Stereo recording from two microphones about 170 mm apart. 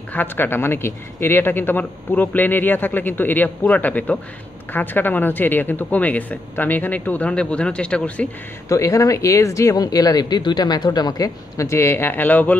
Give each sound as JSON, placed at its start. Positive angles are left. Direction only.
{"t": 0.1, "sound": "speech", "side_deg": 10}
{"t": 8.6, "sound": "speech", "side_deg": 20}